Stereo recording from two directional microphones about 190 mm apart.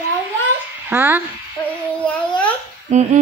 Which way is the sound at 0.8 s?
10° right (ahead or behind).